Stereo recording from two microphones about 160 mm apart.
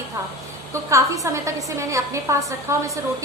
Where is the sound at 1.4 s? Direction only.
20° right (ahead or behind).